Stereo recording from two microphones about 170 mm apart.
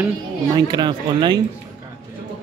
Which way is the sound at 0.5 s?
25° right (ahead or behind).